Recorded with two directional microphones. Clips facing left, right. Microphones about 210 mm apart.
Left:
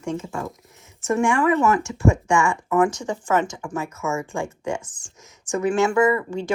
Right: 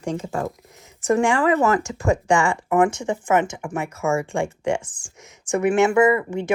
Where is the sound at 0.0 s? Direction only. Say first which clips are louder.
Right 2 dB; 35° right (ahead or behind).